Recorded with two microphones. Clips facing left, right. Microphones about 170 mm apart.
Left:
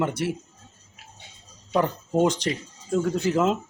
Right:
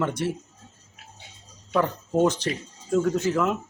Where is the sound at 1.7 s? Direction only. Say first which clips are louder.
Even; 15° left (ahead or behind).